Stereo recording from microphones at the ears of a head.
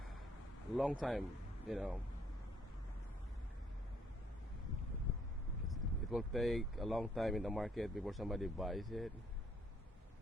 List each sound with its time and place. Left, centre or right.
0.7 s speech: centre
4.6 s wind noise: left
5.5 s a sound: left
6.1 s speech: centre